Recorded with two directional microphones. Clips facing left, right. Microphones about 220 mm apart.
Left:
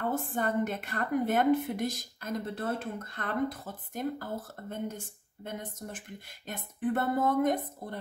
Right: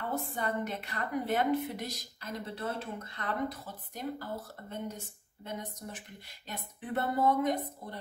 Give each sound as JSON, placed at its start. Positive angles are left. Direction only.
{"t": 0.1, "sound": "a woman's voice", "side_deg": 50}